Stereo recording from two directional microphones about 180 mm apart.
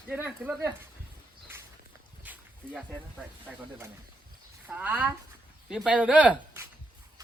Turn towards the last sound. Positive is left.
turn(degrees=-10)  # may be behind; listen again after turning